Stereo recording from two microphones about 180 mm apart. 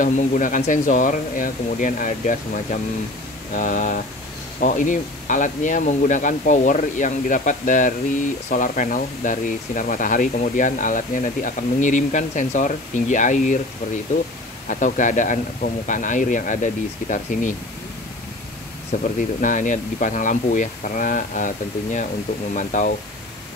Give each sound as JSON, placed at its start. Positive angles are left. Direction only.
{"t": 0.0, "sound": "speech", "side_deg": 50}
{"t": 14.7, "sound": "speech", "side_deg": 45}
{"t": 18.9, "sound": "speech", "side_deg": 45}